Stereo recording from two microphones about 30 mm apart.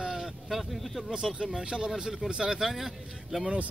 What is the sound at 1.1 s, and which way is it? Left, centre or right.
Speech, right.